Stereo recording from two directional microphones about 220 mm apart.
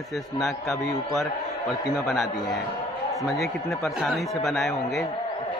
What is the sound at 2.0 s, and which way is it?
A man's voice, centre (ahead or behind).